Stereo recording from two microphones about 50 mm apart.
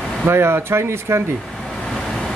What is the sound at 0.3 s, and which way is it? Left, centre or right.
Speech, right.